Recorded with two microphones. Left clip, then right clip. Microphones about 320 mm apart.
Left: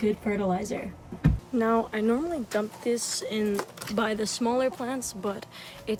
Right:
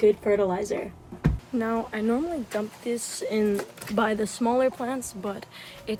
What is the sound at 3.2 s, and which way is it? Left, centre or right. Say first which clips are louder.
Speech: right 3 dB; centre.